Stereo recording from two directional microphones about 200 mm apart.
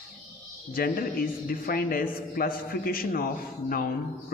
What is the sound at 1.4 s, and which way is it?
A man's voice, 50° left (ahead or behind).